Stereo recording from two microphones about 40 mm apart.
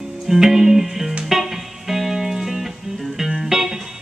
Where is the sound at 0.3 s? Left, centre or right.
Centre.